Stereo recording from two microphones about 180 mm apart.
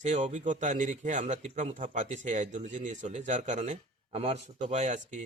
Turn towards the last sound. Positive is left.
turn(degrees=-40)  # may be behind; listen again after turning